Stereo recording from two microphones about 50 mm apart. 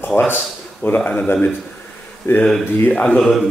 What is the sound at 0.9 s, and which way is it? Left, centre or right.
Speech, left.